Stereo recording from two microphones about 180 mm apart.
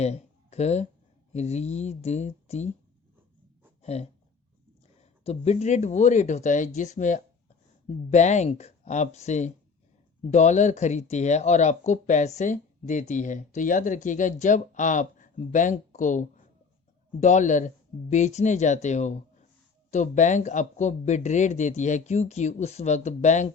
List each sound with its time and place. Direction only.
0.0 s a sound: 35° left (ahead or behind)
1.3 s speech: 40° left (ahead or behind)
3.8 s speech: 35° left (ahead or behind)